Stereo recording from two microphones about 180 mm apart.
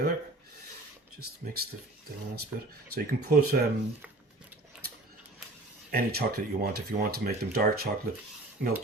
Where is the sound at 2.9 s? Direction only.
55° right (ahead or behind).